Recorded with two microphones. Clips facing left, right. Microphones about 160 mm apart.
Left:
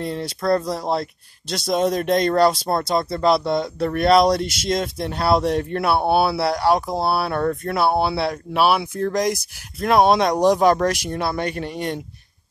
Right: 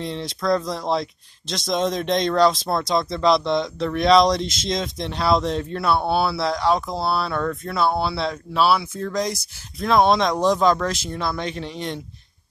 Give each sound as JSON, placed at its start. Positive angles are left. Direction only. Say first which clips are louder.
{"t": 0.0, "sound": "speech", "louder": "left 2 dB", "side_deg": 5}
{"t": 11.3, "sound": "speech", "louder": "left 3 dB", "side_deg": 55}